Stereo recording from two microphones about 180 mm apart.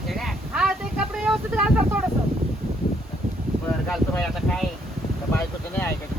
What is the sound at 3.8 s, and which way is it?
Speech, 5° left (ahead or behind).